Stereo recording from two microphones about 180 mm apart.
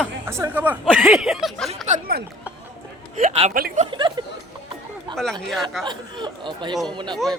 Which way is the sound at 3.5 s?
50° right (ahead or behind).